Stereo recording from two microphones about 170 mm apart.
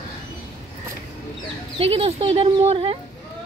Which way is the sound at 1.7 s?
35° right (ahead or behind).